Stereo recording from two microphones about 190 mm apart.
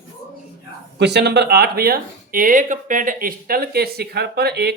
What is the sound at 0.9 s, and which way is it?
Speech, 60° right (ahead or behind).